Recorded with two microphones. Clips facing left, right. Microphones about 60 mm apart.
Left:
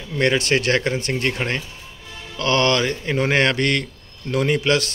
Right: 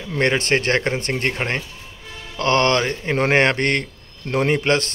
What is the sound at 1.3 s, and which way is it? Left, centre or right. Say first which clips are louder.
A man's voice: right 1 dB; right.